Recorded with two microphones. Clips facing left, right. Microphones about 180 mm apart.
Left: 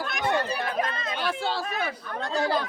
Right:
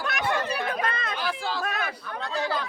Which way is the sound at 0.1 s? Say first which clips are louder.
Left 1 dB; 65° right (ahead or behind).